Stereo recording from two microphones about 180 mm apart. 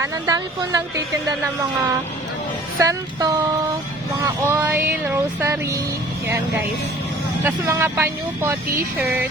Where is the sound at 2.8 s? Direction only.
20° right (ahead or behind).